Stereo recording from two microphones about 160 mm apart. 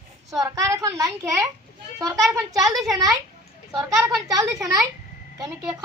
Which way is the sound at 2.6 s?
Centre (ahead or behind).